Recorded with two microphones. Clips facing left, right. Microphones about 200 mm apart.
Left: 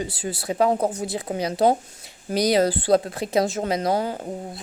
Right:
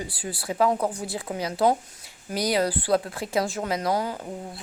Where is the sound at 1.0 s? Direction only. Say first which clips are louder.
Left 4 dB; 20° left (ahead or behind).